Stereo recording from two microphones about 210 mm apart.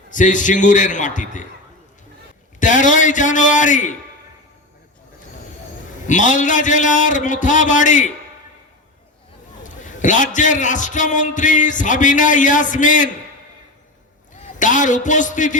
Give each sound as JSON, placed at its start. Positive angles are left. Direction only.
{"t": 0.1, "sound": "a man's voice", "side_deg": 35}
{"t": 2.6, "sound": "a man's voice", "side_deg": 35}
{"t": 6.1, "sound": "a man's voice", "side_deg": 35}
{"t": 9.6, "sound": "a man's voice", "side_deg": 35}
{"t": 14.6, "sound": "a man's voice", "side_deg": 35}